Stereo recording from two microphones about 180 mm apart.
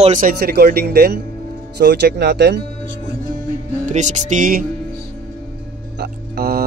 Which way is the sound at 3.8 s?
40° right (ahead or behind).